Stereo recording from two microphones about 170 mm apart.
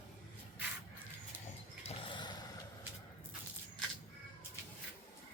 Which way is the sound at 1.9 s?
30° left (ahead or behind).